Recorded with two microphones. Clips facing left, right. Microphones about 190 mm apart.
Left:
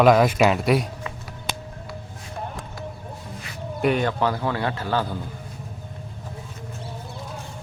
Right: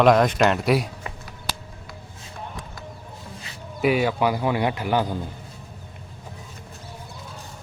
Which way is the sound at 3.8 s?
5° right (ahead or behind).